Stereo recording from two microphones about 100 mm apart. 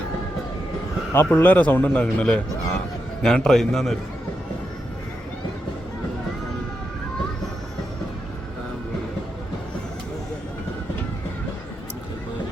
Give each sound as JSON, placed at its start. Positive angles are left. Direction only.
{"t": 1.1, "sound": "a man's voice", "side_deg": 25}